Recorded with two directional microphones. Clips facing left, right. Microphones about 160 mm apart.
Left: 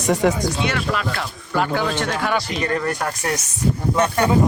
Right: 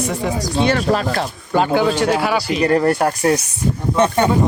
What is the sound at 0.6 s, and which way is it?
Speech, 35° right (ahead or behind).